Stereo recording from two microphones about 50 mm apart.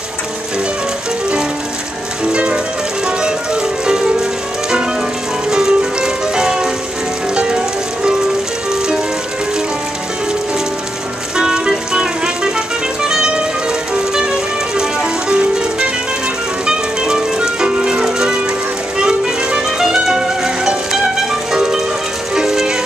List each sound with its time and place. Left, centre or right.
2.3 s music: right
5.5 s music: centre
11.3 s music: centre
13.1 s music: centre
15.2 s music: centre